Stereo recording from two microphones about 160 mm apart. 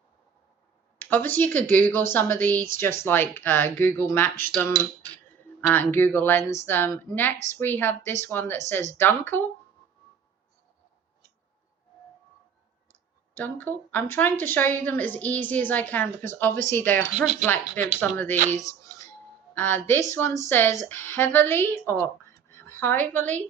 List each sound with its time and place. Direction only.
0.9 s a woman's voice: 10° left (ahead or behind)
13.3 s a woman's voice: 10° left (ahead or behind)
18.5 s music: 20° left (ahead or behind)
19.5 s a woman's voice: 15° left (ahead or behind)